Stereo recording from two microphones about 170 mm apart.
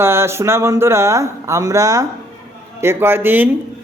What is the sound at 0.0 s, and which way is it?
A man's voice, 15° right (ahead or behind).